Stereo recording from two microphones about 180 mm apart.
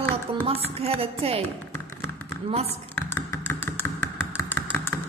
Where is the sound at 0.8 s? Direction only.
35° right (ahead or behind).